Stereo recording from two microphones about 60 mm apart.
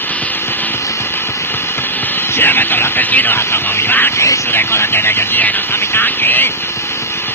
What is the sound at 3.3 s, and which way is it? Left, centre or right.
Speech, left.